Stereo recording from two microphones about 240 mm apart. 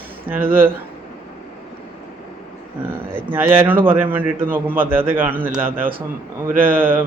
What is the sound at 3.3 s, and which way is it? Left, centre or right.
A man's voice, centre.